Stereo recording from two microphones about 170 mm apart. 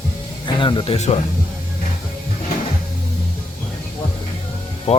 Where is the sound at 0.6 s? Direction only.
30° left (ahead or behind).